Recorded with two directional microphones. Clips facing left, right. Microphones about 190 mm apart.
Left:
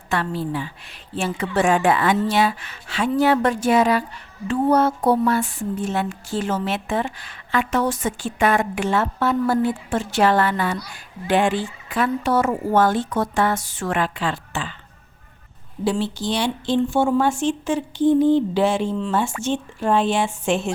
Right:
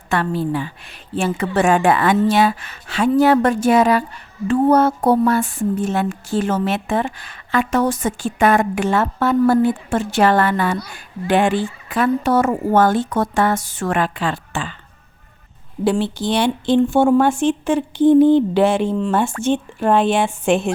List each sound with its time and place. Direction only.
0.1 s speech: 55° right (ahead or behind)
15.8 s a woman's voice: 60° right (ahead or behind)